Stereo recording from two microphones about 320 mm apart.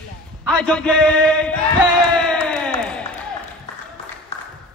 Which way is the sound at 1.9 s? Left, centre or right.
Centre.